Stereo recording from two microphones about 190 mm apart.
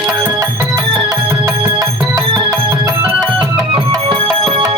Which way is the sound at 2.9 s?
10° right (ahead or behind).